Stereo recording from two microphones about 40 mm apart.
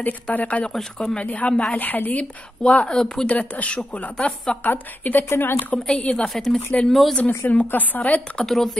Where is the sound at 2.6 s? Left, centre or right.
Left.